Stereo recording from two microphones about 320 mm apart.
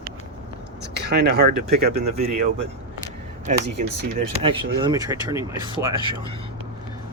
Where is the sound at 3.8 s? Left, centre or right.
Right.